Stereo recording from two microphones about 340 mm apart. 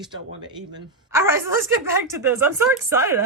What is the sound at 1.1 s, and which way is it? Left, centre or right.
Speech, centre.